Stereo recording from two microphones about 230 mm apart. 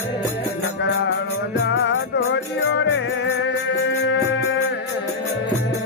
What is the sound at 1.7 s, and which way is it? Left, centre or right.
Music, left.